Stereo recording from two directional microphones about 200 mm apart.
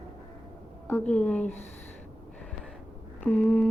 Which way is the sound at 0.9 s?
5° left (ahead or behind).